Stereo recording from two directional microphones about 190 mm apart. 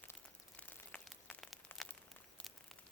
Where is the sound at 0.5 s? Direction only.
5° left (ahead or behind).